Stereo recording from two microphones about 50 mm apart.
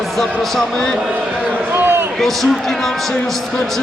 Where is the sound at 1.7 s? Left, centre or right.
Right.